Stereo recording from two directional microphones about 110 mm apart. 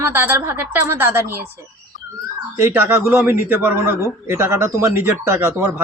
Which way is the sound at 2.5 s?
20° right (ahead or behind).